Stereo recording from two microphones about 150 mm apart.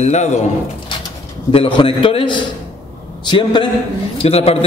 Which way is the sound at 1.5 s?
35° left (ahead or behind).